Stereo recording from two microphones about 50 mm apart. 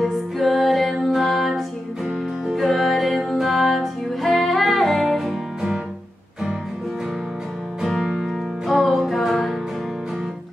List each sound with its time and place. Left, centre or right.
0.0 s music: centre
8.6 s music: centre